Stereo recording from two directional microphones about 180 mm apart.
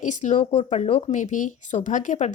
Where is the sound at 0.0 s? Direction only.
40° left (ahead or behind).